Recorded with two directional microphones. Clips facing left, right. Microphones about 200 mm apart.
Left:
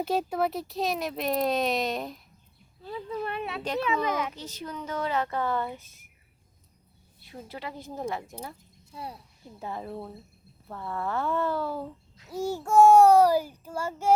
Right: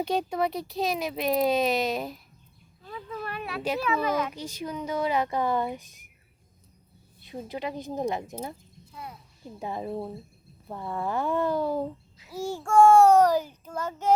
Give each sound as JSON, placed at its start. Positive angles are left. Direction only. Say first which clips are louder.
{"t": 0.0, "sound": "speech", "louder": "even", "side_deg": 5}
{"t": 2.8, "sound": "speech", "louder": "left 4 dB", "side_deg": 30}
{"t": 3.6, "sound": "speech", "louder": "right 2 dB", "side_deg": -5}
{"t": 3.8, "sound": "child singing", "louder": "right 2 dB", "side_deg": 15}
{"t": 4.4, "sound": "speech", "louder": "right 4 dB", "side_deg": -10}
{"t": 7.2, "sound": "speech", "louder": "right 6 dB", "side_deg": -20}
{"t": 8.9, "sound": "speech", "louder": "left 3 dB", "side_deg": 30}
{"t": 9.6, "sound": "speech", "louder": "right 4 dB", "side_deg": -15}
{"t": 12.1, "sound": "babbling", "louder": "left 2 dB", "side_deg": -5}
{"t": 12.5, "sound": "child singing", "louder": "even", "side_deg": 10}